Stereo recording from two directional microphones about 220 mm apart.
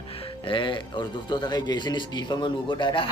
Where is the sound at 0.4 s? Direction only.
20° left (ahead or behind).